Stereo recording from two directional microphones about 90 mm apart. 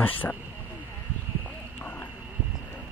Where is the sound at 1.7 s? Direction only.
20° left (ahead or behind).